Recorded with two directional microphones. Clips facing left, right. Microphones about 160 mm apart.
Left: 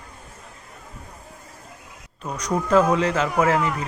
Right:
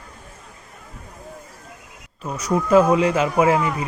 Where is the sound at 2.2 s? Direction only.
5° right (ahead or behind).